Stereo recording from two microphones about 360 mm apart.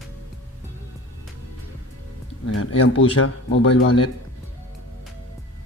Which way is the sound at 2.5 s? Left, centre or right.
Left.